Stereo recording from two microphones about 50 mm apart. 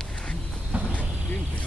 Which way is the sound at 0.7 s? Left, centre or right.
Right.